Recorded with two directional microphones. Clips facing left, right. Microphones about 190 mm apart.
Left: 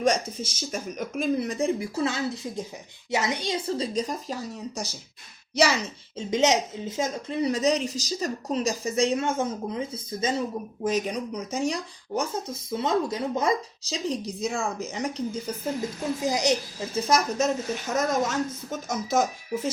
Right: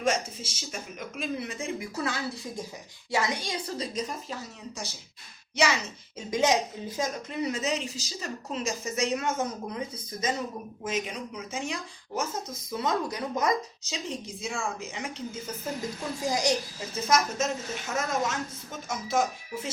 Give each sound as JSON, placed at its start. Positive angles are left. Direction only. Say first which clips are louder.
{"t": 0.0, "sound": "a woman's voice", "louder": "left 4 dB", "side_deg": 40}
{"t": 6.1, "sound": "a woman's voice", "louder": "left 2 dB", "side_deg": 25}
{"t": 10.8, "sound": "a woman's voice", "louder": "left 6 dB", "side_deg": 40}
{"t": 12.7, "sound": "a woman's voice", "louder": "left 4 dB", "side_deg": 25}
{"t": 16.2, "sound": "a woman's voice", "louder": "left 2 dB", "side_deg": 20}